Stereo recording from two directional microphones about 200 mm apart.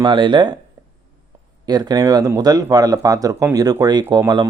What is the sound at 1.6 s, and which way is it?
Speech, 20° right (ahead or behind).